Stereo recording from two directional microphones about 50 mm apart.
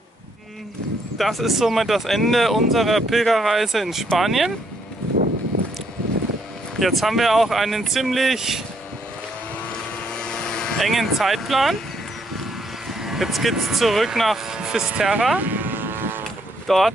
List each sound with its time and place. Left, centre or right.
1.1 s speech: centre
6.8 s speech: centre
9.7 s vehicle: centre
10.8 s speech: centre
12.8 s speech: centre
15.3 s vehicle: right
16.6 s speech: centre